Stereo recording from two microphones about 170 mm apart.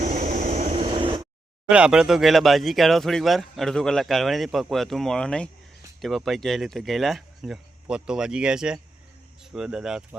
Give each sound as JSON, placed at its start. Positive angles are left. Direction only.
{"t": 0.0, "sound": "vehicle", "side_deg": -45}
{"t": 1.7, "sound": "speech", "side_deg": -5}